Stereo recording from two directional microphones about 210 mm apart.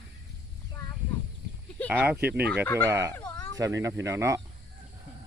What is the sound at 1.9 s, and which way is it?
Speech, 10° right (ahead or behind).